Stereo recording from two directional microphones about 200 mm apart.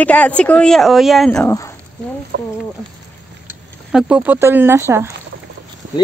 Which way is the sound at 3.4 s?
5° right (ahead or behind).